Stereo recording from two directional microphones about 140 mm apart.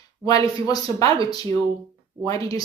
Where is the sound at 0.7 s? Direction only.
25° left (ahead or behind).